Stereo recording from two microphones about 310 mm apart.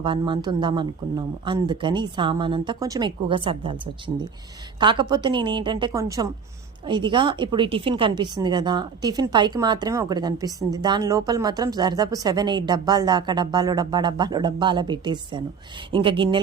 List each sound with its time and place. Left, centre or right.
0.0 s speech: centre